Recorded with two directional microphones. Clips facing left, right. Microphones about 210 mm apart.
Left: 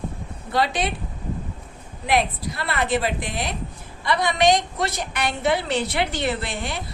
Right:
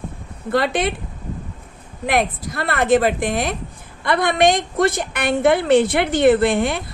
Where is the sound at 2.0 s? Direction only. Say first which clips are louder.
Right 2 dB; 50° right (ahead or behind).